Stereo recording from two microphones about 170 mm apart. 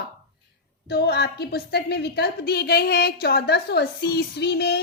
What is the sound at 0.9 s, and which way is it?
A woman's voice, 75° left (ahead or behind).